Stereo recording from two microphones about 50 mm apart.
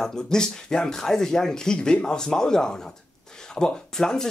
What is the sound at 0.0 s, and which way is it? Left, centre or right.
Speech, centre.